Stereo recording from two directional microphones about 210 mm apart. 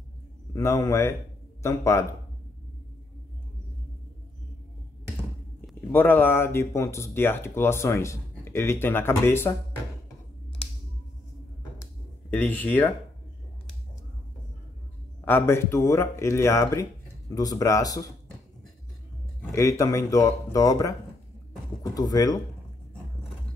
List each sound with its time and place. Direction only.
0.5 s speech: 15° left (ahead or behind)
5.9 s speech: 10° left (ahead or behind)
11.8 s a sound: 10° left (ahead or behind)
15.2 s speech: 10° left (ahead or behind)
19.5 s speech: 15° left (ahead or behind)